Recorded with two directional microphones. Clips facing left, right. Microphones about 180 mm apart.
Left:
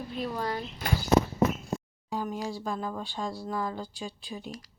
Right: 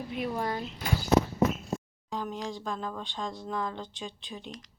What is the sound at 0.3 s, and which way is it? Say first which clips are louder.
Speech: left 1 dB; 25° right (ahead or behind).